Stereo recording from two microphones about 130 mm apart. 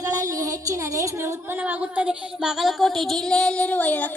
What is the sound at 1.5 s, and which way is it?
Child singing, 10° right (ahead or behind).